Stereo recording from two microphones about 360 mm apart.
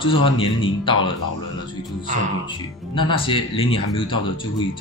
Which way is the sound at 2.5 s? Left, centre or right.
Centre.